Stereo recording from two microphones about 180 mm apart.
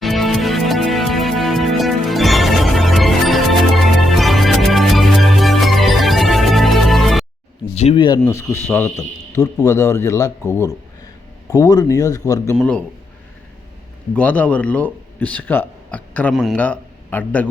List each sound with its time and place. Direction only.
0.0 s music: centre (ahead or behind)
7.8 s speech: 35° left (ahead or behind)
8.2 s a man's voice: 15° left (ahead or behind)
14.1 s a man's voice: 5° left (ahead or behind)